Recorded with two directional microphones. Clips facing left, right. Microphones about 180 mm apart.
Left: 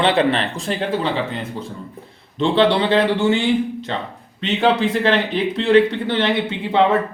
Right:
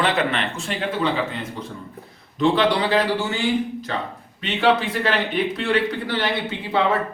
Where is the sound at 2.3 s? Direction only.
25° left (ahead or behind).